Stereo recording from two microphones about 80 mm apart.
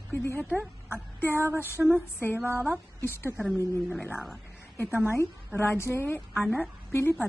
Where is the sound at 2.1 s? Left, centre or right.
Left.